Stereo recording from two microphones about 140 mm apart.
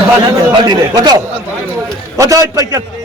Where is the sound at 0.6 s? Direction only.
30° right (ahead or behind).